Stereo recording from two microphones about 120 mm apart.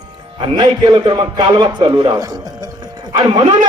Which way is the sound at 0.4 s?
40° right (ahead or behind).